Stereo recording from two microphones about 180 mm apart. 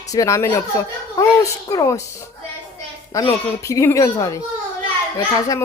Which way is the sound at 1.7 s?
20° left (ahead or behind).